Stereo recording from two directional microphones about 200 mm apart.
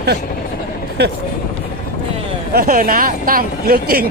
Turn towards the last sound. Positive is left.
turn(degrees=-50)  # may be behind; listen again after turning